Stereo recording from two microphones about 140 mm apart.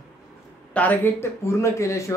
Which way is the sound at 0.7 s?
10° left (ahead or behind).